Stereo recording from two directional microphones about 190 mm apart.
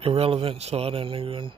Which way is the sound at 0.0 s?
30° right (ahead or behind).